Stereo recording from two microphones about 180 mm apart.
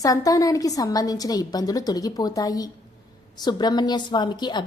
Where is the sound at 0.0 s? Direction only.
20° left (ahead or behind).